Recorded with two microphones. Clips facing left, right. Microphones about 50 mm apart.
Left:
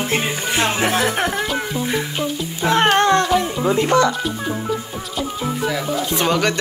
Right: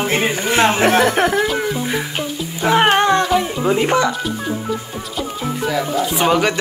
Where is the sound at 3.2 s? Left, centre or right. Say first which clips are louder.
Right 1 dB; centre.